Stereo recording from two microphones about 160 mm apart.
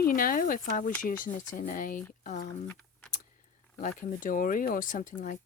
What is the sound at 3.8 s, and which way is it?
Speech, 55° left (ahead or behind).